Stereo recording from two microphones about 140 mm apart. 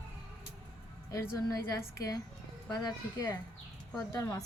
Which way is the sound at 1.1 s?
25° left (ahead or behind).